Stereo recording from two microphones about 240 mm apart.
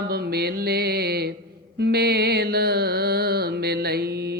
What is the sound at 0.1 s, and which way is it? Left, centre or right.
Music, right.